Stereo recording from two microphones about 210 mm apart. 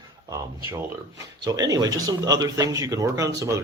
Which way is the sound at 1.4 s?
15° right (ahead or behind).